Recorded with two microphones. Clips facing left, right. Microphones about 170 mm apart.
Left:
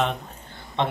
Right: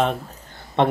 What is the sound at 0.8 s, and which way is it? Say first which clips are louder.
Speech: right 6 dB; 55° right (ahead or behind).